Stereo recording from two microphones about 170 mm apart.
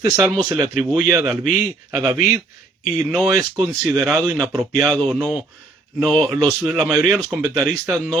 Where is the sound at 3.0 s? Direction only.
Centre (ahead or behind).